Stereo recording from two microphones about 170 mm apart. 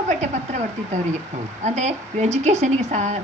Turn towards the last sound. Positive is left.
turn(degrees=-45)  # may be behind; listen again after turning